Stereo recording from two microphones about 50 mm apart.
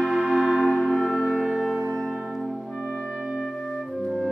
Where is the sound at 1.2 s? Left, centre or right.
Centre.